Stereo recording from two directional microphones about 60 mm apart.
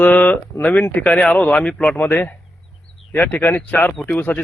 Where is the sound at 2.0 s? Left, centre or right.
Left.